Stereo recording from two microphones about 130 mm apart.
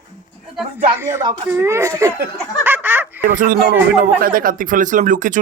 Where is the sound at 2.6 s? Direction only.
15° right (ahead or behind).